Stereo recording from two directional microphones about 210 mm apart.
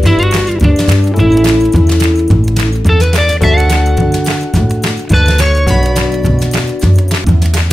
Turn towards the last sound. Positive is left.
turn(degrees=0)  # may be behind; listen again after turning